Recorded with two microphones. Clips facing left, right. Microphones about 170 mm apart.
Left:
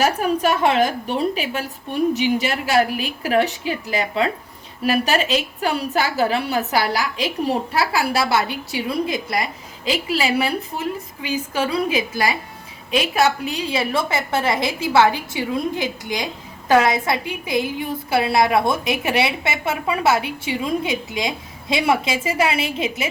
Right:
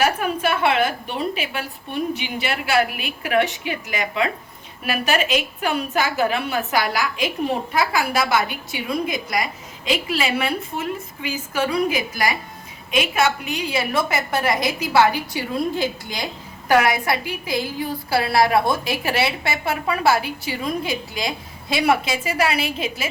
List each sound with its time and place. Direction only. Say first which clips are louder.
0.4 s a woman's voice: left 1 dB; 40° left (ahead or behind)